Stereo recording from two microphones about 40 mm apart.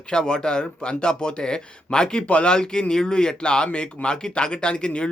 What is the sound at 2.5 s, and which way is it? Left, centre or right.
Speech, centre.